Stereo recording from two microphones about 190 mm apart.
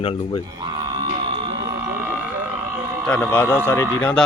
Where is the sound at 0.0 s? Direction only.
30° left (ahead or behind).